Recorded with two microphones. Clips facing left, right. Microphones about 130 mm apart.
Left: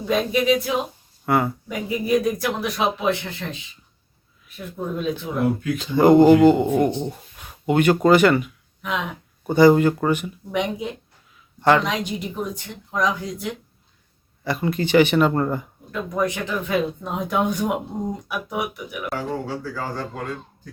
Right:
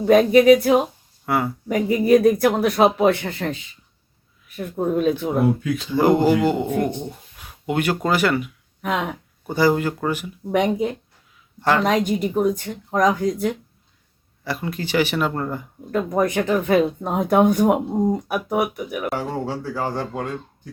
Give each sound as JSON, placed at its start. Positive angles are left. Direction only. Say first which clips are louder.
{"t": 0.0, "sound": "speech", "louder": "right 8 dB", "side_deg": -55}
{"t": 1.2, "sound": "speech", "louder": "left 2 dB", "side_deg": 0}
{"t": 1.6, "sound": "speech", "louder": "right 7 dB", "side_deg": -50}
{"t": 6.0, "sound": "speech", "louder": "left 5 dB", "side_deg": -5}
{"t": 8.8, "sound": "speech", "louder": "right 3 dB", "side_deg": -45}
{"t": 9.6, "sound": "speech", "louder": "left 5 dB", "side_deg": -5}
{"t": 10.5, "sound": "speech", "louder": "right 5 dB", "side_deg": -50}
{"t": 14.4, "sound": "speech", "louder": "left 4 dB", "side_deg": -5}
{"t": 15.9, "sound": "speech", "louder": "right 4 dB", "side_deg": -45}
{"t": 19.1, "sound": "speech", "louder": "right 2 dB", "side_deg": -25}